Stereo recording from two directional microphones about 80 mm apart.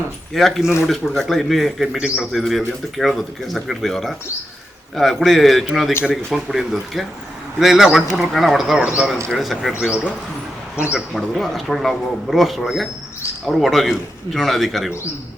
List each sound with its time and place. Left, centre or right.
0.3 s speech: centre
8.8 s speech: centre
9.4 s speech: centre
9.8 s speech: centre
11.1 s speech: centre